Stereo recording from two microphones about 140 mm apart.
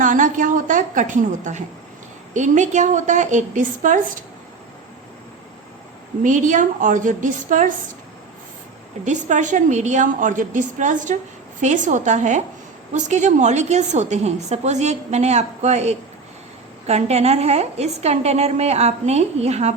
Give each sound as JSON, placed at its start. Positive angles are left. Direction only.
{"t": 0.0, "sound": "a woman's voice", "side_deg": -70}
{"t": 6.2, "sound": "a woman's voice", "side_deg": -65}
{"t": 9.0, "sound": "a woman's voice", "side_deg": -60}